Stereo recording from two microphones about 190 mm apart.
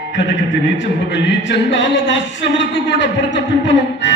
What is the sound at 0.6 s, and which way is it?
Speech, 70° left (ahead or behind).